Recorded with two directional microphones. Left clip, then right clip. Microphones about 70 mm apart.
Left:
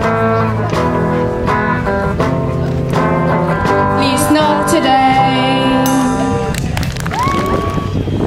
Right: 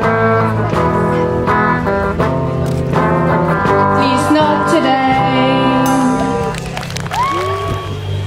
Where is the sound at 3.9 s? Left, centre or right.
Left.